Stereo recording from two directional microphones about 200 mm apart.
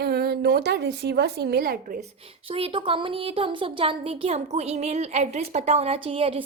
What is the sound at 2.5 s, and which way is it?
Speech, 25° right (ahead or behind).